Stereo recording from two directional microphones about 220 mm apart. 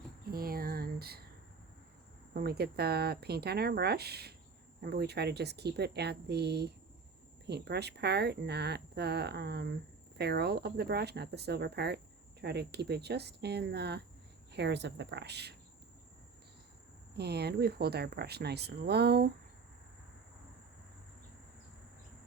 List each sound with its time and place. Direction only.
0.3 s a sound: 40° right (ahead or behind)
2.3 s speech: 45° right (ahead or behind)
17.2 s speech: 45° right (ahead or behind)